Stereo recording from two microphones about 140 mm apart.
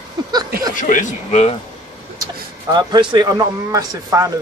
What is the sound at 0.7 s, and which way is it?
Speech, 65° left (ahead or behind).